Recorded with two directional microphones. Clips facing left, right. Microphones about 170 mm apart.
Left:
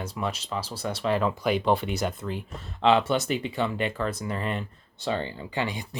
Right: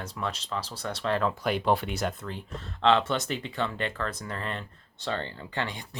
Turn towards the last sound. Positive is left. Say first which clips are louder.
# left 4 dB
turn(degrees=10)  # may be behind; listen again after turning